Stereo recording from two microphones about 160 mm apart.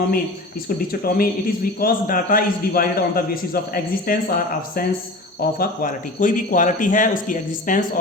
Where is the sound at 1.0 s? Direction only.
65° left (ahead or behind).